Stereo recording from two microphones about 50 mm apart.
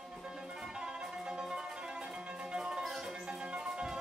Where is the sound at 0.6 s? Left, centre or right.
Centre.